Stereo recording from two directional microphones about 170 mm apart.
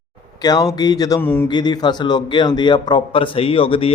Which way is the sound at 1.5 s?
25° left (ahead or behind).